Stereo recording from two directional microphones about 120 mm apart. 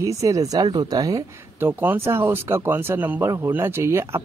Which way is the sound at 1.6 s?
20° right (ahead or behind).